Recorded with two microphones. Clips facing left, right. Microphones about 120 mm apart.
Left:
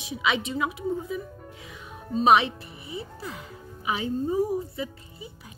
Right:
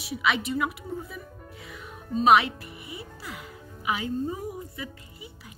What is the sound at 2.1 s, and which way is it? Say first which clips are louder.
Speech: even; 25° left (ahead or behind).